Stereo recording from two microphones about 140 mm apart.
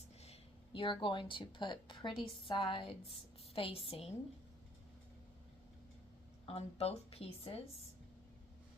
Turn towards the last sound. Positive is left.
turn(degrees=45)  # may be behind; listen again after turning